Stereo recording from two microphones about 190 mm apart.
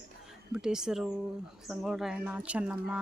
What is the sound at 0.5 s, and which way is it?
Speech, 5° right (ahead or behind).